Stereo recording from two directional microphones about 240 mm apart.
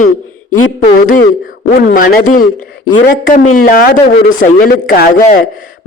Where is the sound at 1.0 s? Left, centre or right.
Left.